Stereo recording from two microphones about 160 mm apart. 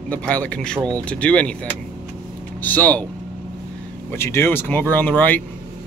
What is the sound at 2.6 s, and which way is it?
Speech, 10° left (ahead or behind).